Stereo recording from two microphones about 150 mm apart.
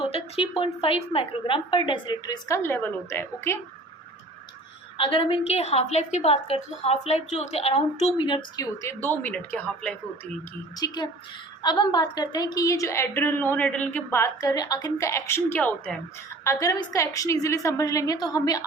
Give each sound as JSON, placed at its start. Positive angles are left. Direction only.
{"t": 0.0, "sound": "a woman's voice", "side_deg": 40}
{"t": 2.6, "sound": "speech", "side_deg": 15}
{"t": 4.9, "sound": "a woman's voice", "side_deg": 35}
{"t": 8.2, "sound": "a woman's voice", "side_deg": 35}
{"t": 8.8, "sound": "speech", "side_deg": 15}
{"t": 10.8, "sound": "a woman's voice", "side_deg": 25}